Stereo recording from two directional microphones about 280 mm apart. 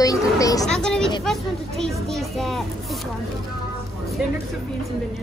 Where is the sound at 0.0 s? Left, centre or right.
Centre.